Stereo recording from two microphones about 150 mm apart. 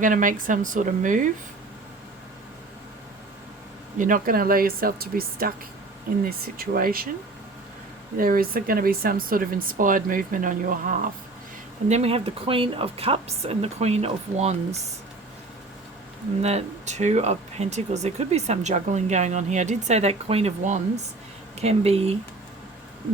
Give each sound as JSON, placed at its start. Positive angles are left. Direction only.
{"t": 0.0, "sound": "speech", "side_deg": -60}
{"t": 3.9, "sound": "speech", "side_deg": -60}
{"t": 8.1, "sound": "speech", "side_deg": -70}
{"t": 11.9, "sound": "a woman's voice", "side_deg": -45}
{"t": 16.4, "sound": "speech", "side_deg": -45}